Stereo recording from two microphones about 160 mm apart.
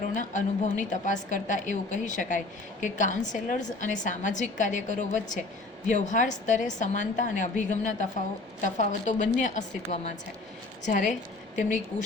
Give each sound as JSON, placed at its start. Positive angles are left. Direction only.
{"t": 0.1, "sound": "a woman's voice", "side_deg": 50}